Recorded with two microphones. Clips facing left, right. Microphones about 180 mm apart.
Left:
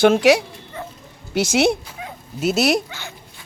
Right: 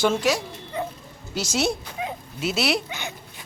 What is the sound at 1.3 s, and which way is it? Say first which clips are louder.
Speech: left 7 dB; 60° left (ahead or behind).